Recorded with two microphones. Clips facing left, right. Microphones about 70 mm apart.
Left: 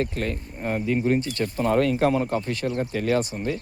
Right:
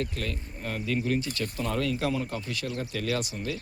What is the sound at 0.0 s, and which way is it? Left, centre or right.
Speech, left.